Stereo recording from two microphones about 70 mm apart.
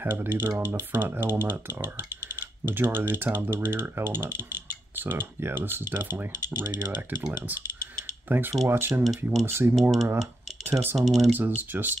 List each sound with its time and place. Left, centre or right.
0.0 s speech: right
8.3 s speech: right
9.0 s speech: centre
9.5 s speech: right
9.8 s speech: centre
11.3 s speech: right